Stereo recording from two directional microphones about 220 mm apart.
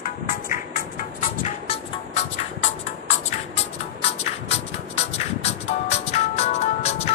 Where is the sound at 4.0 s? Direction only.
25° left (ahead or behind).